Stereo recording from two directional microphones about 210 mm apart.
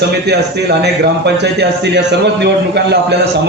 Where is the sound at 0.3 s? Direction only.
50° right (ahead or behind).